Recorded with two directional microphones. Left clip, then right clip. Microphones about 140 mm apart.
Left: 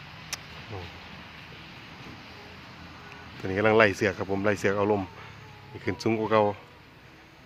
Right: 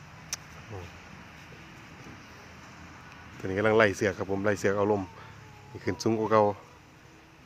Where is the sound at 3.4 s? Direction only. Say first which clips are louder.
Left 2 dB; centre (ahead or behind).